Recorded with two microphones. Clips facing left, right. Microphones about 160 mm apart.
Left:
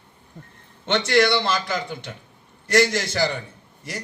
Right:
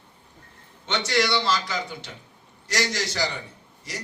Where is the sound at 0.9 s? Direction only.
55° left (ahead or behind).